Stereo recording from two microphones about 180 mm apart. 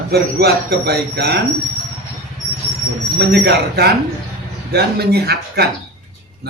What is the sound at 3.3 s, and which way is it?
Speech, 65° right (ahead or behind).